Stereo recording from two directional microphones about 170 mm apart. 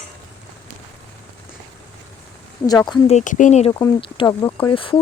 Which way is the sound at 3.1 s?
50° left (ahead or behind).